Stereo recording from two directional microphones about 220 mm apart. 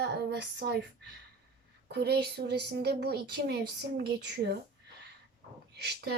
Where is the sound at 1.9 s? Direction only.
45° right (ahead or behind).